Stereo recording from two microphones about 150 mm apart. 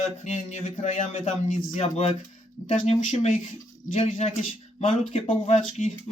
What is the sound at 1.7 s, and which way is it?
Speech, 45° left (ahead or behind).